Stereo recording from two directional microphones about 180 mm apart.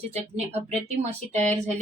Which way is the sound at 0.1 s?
35° right (ahead or behind).